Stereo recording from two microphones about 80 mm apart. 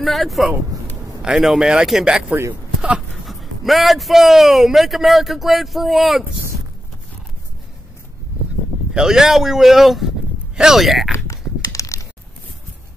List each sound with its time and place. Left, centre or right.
0.0 s a man's voice: centre
8.9 s speech: centre
11.2 s a sound: left